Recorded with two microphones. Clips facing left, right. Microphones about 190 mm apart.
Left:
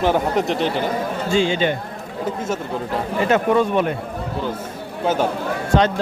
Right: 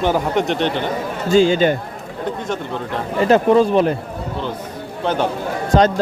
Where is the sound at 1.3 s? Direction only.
40° right (ahead or behind).